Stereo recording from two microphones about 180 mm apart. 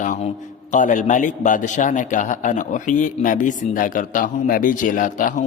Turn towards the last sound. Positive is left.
turn(degrees=45)  # may be behind; listen again after turning